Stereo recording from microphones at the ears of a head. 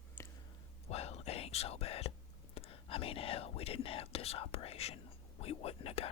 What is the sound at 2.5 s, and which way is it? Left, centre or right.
Speech, left.